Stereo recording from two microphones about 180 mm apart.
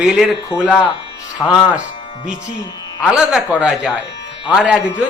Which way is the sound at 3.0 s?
5° right (ahead or behind).